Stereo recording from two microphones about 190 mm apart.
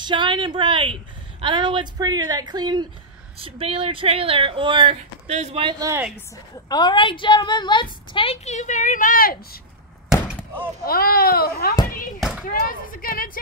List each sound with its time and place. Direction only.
0.0 s speech: 25° right (ahead or behind)
6.1 s a woman's voice: 20° left (ahead or behind); by 9.6 s 50° left (ahead or behind)
10.8 s speech: 50° left (ahead or behind)
12.2 s a sound: 5° right (ahead or behind)
12.4 s speech: 50° left (ahead or behind)